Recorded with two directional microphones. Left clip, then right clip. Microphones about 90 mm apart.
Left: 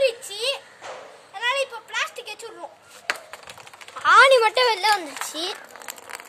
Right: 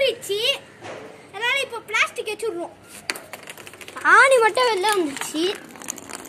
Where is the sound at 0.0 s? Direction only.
50° left (ahead or behind).